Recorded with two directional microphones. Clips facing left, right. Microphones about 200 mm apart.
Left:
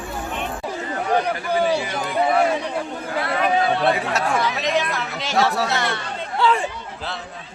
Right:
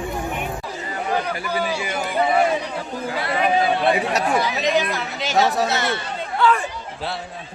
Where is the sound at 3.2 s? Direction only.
5° right (ahead or behind).